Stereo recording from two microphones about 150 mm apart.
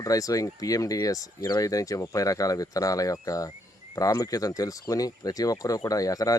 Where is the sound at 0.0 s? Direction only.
20° left (ahead or behind).